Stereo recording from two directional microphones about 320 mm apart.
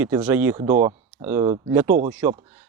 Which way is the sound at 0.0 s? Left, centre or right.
Centre.